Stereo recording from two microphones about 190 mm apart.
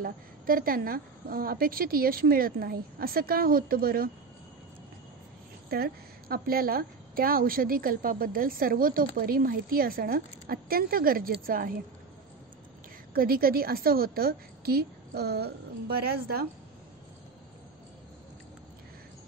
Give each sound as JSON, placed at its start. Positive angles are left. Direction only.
{"t": 0.0, "sound": "a woman's voice", "side_deg": -50}
{"t": 5.7, "sound": "a woman's voice", "side_deg": -55}
{"t": 13.1, "sound": "a woman's voice", "side_deg": -50}